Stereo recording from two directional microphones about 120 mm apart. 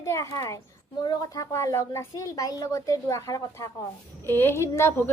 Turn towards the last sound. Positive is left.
turn(degrees=20)  # may be behind; listen again after turning